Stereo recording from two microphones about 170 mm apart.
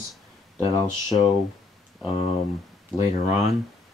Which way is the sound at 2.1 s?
35° left (ahead or behind).